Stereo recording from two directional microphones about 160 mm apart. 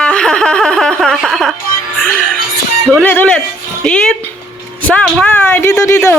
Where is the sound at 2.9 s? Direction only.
10° left (ahead or behind).